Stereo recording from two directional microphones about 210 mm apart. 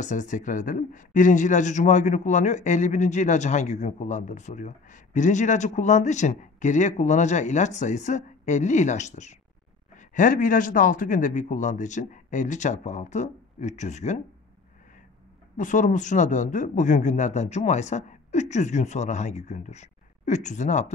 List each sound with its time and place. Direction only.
0.0 s speech: 35° left (ahead or behind)
15.5 s speech: 40° left (ahead or behind)